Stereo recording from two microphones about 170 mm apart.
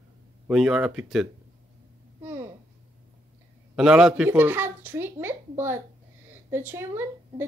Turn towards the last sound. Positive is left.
turn(degrees=-15)  # may be behind; listen again after turning